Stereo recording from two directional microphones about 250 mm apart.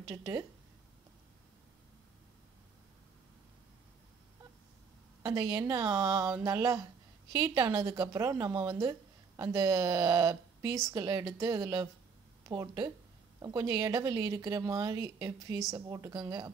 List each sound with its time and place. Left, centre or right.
0.1 s a woman's voice: centre
5.2 s a woman's voice: centre